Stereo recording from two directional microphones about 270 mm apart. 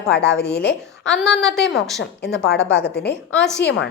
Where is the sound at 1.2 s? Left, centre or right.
Centre.